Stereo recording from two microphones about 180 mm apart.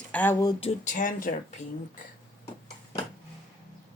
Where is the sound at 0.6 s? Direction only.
45° left (ahead or behind).